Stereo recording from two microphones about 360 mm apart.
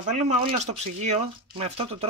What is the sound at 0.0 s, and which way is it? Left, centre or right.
Speech, centre.